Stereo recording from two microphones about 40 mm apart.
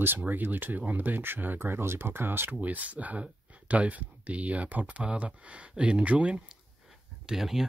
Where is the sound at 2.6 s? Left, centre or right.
Right.